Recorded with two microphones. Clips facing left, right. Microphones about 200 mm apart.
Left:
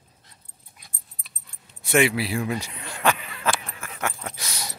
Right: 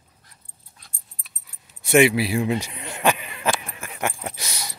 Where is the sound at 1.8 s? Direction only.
15° right (ahead or behind).